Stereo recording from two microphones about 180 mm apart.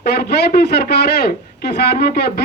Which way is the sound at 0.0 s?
65° left (ahead or behind).